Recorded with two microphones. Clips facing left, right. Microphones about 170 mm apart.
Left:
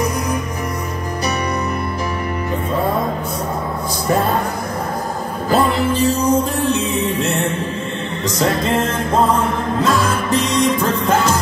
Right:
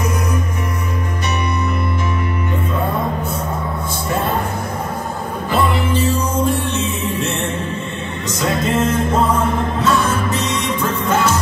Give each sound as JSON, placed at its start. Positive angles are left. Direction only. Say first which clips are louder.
{"t": 5.5, "sound": "music", "louder": "left 2 dB", "side_deg": 40}
{"t": 8.4, "sound": "music", "louder": "left 1 dB", "side_deg": 30}